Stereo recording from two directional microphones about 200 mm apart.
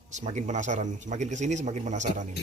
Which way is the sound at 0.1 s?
35° right (ahead or behind).